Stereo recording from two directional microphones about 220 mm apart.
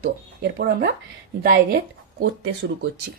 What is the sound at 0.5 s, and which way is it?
Speech, 45° right (ahead or behind).